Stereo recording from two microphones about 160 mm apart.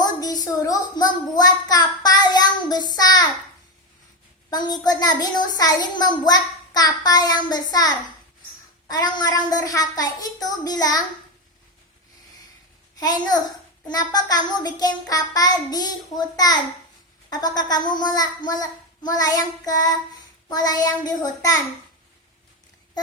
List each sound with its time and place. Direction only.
0.0 s a child's voice: 25° left (ahead or behind)
4.4 s a child's voice: 25° left (ahead or behind)
13.0 s a child's voice: 25° left (ahead or behind)